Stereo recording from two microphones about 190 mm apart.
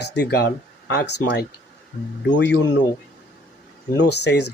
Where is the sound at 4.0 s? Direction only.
60° left (ahead or behind).